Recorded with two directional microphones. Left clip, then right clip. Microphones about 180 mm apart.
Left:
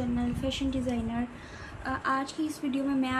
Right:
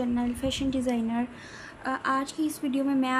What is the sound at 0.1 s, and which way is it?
A woman's voice, 50° right (ahead or behind).